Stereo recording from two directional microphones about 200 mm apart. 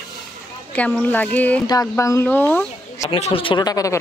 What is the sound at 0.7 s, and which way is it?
Speech, 5° left (ahead or behind).